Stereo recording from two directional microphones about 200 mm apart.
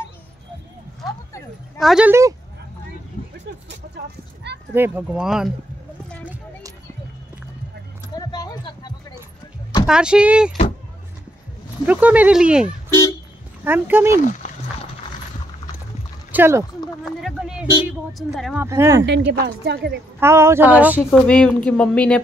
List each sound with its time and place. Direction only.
1.8 s speech: 5° right (ahead or behind)
3.6 s a sound: 55° right (ahead or behind)
4.7 s a woman's voice: 10° right (ahead or behind)
8.2 s a sound: 20° left (ahead or behind)
9.8 s a woman's voice: 5° right (ahead or behind)
11.8 s a woman's voice: 5° right (ahead or behind)
16.3 s speech: 10° right (ahead or behind)
17.0 s a sound: centre (ahead or behind)
17.8 s a woman's voice: centre (ahead or behind)
18.6 s speech: 15° right (ahead or behind)
19.0 s speech: 60° right (ahead or behind)
20.2 s speech: 15° right (ahead or behind)
21.1 s a woman's voice: 5° left (ahead or behind)